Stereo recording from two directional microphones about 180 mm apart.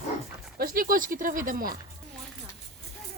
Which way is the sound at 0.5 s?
55° right (ahead or behind).